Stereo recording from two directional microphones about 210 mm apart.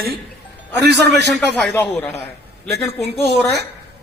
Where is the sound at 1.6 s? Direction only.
5° left (ahead or behind).